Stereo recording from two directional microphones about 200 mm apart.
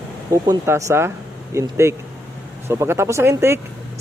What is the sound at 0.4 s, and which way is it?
Speech, 15° right (ahead or behind).